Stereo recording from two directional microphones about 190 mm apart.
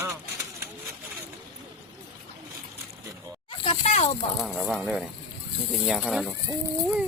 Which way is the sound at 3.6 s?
30° left (ahead or behind).